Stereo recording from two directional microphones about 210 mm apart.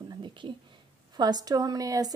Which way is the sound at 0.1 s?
20° right (ahead or behind).